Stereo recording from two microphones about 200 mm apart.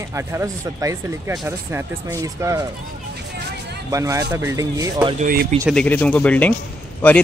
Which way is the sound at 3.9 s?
15° right (ahead or behind).